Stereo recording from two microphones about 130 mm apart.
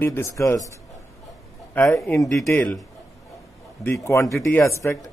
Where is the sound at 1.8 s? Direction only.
15° left (ahead or behind).